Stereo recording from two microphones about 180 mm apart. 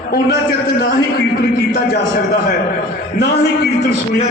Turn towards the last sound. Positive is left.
turn(degrees=65)  # may be behind; listen again after turning